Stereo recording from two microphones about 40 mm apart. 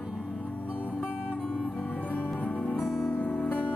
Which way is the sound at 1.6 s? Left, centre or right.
Left.